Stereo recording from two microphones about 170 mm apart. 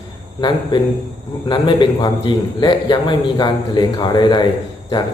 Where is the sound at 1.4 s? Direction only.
25° left (ahead or behind).